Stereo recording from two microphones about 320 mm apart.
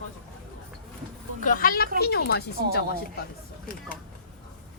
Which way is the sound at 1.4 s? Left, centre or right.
Left.